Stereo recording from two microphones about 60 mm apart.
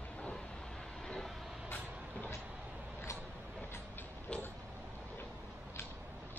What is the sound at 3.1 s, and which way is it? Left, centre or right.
Vehicle, left.